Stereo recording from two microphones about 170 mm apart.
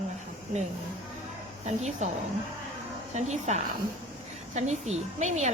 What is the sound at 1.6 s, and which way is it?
Speech, 40° right (ahead or behind).